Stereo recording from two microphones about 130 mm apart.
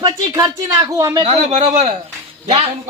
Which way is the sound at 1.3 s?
55° right (ahead or behind).